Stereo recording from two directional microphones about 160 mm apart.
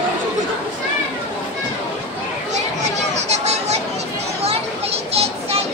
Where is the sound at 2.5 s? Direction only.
45° right (ahead or behind).